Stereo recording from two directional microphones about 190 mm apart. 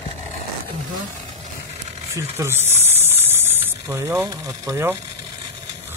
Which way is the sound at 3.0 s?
10° right (ahead or behind).